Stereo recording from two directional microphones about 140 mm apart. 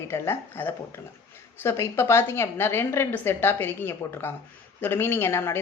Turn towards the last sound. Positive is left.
turn(degrees=15)  # may be behind; listen again after turning